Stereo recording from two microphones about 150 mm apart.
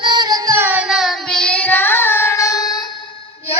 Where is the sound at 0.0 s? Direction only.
30° right (ahead or behind).